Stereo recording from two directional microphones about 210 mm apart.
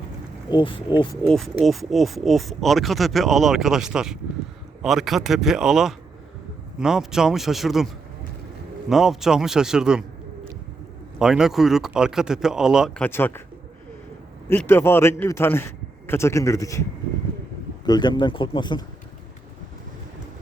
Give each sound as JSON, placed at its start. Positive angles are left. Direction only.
{"t": 0.5, "sound": "speech", "side_deg": 25}
{"t": 1.1, "sound": "speech", "side_deg": 0}
{"t": 8.9, "sound": "speech", "side_deg": 0}
{"t": 11.2, "sound": "speech", "side_deg": -5}
{"t": 13.1, "sound": "a man's voice", "side_deg": 10}
{"t": 14.5, "sound": "a man's voice", "side_deg": 10}
{"t": 17.8, "sound": "speech", "side_deg": 20}